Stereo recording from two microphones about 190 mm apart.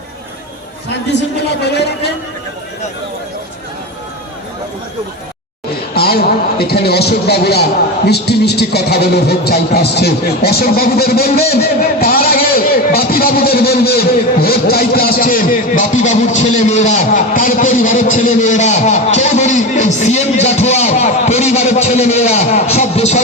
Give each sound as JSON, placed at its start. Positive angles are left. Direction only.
{"t": 1.1, "sound": "a man's voice", "side_deg": 65}
{"t": 5.9, "sound": "a man's voice", "side_deg": 55}